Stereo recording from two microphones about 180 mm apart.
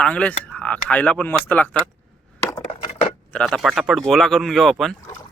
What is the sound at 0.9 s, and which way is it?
Speech, 5° left (ahead or behind).